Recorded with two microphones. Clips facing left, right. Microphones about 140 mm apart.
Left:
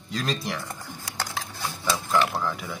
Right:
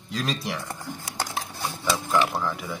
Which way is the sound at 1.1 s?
25° right (ahead or behind).